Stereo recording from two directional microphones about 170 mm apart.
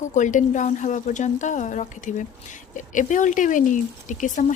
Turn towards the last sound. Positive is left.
turn(degrees=45)  # may be behind; listen again after turning